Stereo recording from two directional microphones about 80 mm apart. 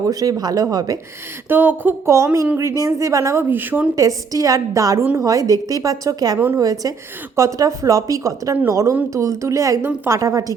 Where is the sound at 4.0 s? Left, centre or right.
Right.